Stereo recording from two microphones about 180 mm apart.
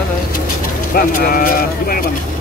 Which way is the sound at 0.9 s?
55° left (ahead or behind).